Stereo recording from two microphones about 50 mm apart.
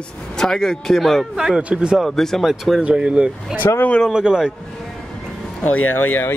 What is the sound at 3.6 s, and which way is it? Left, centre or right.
Speech, left.